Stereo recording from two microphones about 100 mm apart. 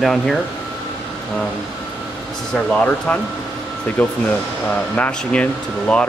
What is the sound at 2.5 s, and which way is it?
Speech, 10° left (ahead or behind).